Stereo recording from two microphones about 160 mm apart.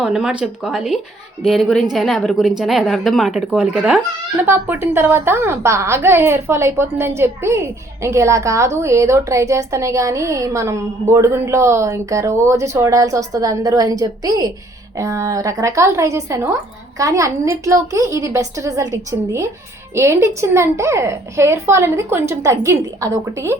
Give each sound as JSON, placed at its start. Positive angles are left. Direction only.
{"t": 0.0, "sound": "a woman's voice", "side_deg": -5}